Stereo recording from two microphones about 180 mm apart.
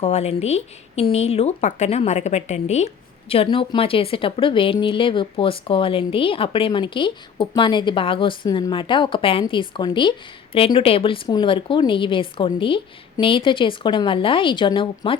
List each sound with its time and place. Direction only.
0.0 s a woman's voice: 40° left (ahead or behind)